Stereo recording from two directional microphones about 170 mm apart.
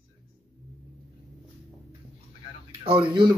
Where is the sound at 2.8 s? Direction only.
30° right (ahead or behind).